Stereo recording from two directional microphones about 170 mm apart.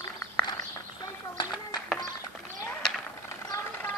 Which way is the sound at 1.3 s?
25° left (ahead or behind).